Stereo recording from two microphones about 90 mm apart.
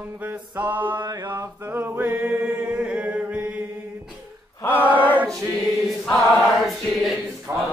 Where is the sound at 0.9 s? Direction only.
45° right (ahead or behind).